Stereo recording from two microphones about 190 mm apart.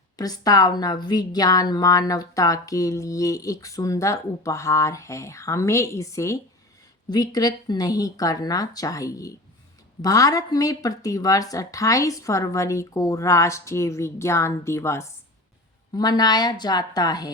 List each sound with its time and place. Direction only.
0.2 s a woman's voice: 20° left (ahead or behind)